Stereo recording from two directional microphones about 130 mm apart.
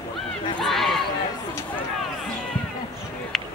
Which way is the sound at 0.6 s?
Centre (ahead or behind).